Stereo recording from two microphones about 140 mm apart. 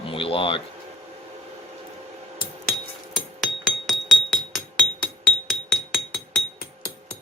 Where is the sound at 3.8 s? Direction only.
Centre (ahead or behind).